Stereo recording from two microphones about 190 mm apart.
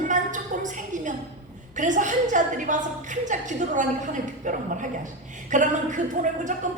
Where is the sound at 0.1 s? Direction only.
40° right (ahead or behind).